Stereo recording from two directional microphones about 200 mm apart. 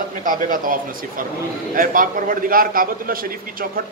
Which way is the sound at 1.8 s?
45° right (ahead or behind).